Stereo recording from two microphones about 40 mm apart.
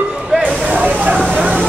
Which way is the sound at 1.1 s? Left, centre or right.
Left.